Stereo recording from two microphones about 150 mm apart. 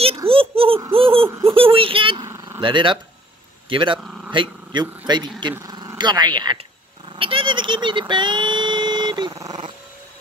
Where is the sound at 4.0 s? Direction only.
5° right (ahead or behind).